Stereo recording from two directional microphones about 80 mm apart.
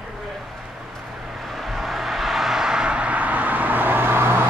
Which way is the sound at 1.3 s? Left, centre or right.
Centre.